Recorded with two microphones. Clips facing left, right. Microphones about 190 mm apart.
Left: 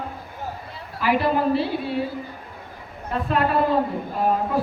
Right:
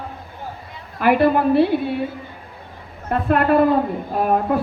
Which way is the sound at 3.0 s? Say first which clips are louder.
Right 5 dB; 55° right (ahead or behind).